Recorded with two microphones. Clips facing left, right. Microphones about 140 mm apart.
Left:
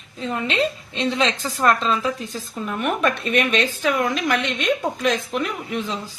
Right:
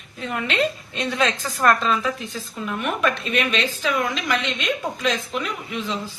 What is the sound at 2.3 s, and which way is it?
A woman's voice, 40° left (ahead or behind).